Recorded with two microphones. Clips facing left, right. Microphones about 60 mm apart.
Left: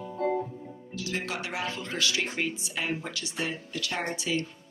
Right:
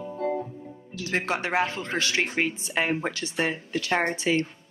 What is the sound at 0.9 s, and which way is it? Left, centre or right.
Speech, right.